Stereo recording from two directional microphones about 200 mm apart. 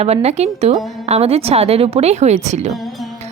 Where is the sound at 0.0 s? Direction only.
30° right (ahead or behind).